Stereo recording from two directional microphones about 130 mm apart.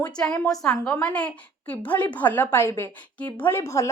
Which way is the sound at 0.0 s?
10° left (ahead or behind).